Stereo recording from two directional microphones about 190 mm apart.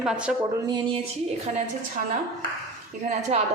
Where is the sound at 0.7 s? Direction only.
25° right (ahead or behind).